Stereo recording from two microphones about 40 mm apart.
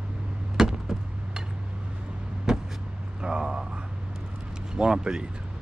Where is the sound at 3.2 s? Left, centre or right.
Right.